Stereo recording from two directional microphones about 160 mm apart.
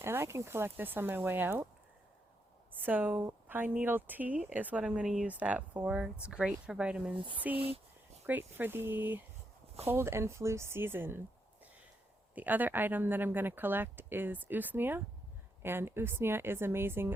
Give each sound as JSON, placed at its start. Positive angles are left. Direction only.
{"t": 0.0, "sound": "speech", "side_deg": -15}
{"t": 2.7, "sound": "speech", "side_deg": -10}
{"t": 7.5, "sound": "speech", "side_deg": -35}
{"t": 8.3, "sound": "speech", "side_deg": -10}
{"t": 12.3, "sound": "speech", "side_deg": -10}